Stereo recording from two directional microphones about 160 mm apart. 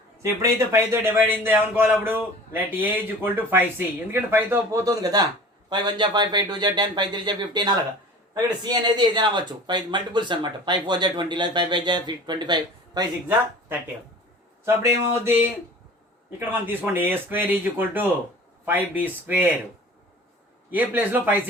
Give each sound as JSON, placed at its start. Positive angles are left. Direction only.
{"t": 0.2, "sound": "speech", "side_deg": -20}
{"t": 14.6, "sound": "speech", "side_deg": -15}
{"t": 20.7, "sound": "speech", "side_deg": -10}